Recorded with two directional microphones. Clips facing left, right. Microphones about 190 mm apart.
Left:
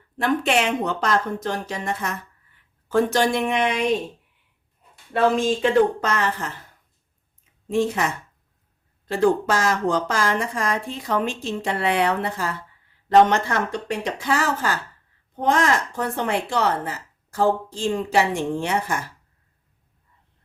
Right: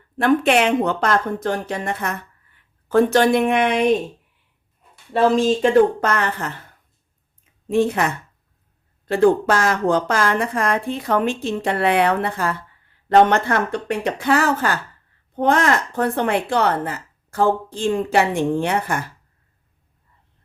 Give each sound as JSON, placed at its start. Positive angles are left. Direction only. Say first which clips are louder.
{"t": 0.2, "sound": "speech", "louder": "right 5 dB", "side_deg": -60}
{"t": 5.3, "sound": "speech", "louder": "right 4 dB", "side_deg": -35}
{"t": 6.0, "sound": "speech", "louder": "right 2 dB", "side_deg": -55}
{"t": 7.7, "sound": "speech", "louder": "right 3 dB", "side_deg": -60}